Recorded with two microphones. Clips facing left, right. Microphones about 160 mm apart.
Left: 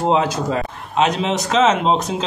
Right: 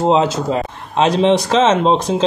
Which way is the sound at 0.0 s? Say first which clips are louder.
Right 3 dB; 25° right (ahead or behind).